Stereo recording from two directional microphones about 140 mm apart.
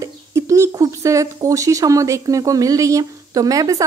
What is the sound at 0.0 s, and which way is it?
Speech, 20° right (ahead or behind).